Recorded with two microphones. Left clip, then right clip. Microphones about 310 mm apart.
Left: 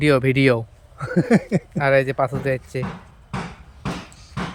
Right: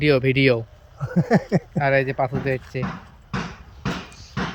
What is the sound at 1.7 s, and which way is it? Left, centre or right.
Speech, centre.